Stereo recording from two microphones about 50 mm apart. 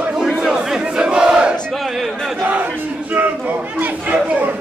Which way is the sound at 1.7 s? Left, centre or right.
Centre.